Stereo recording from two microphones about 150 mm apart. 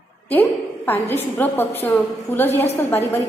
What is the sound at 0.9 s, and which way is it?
A woman's voice, 15° left (ahead or behind).